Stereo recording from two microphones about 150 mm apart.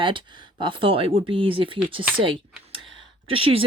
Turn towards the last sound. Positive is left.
turn(degrees=-40)  # may be behind; listen again after turning